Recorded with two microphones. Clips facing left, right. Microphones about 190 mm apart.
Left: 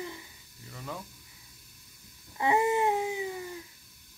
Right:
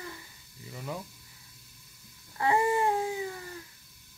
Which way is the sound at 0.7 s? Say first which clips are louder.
Right 2 dB; 10° right (ahead or behind).